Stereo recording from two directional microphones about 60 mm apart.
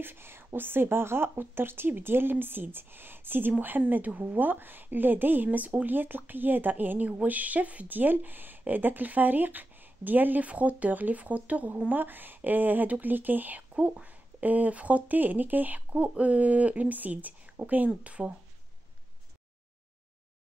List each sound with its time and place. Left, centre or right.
0.0 s a woman's voice: right